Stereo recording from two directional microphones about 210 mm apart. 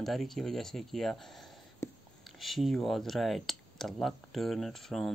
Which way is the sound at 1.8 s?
15° left (ahead or behind).